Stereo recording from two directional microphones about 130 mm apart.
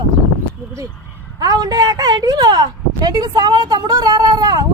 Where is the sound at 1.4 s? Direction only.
30° right (ahead or behind).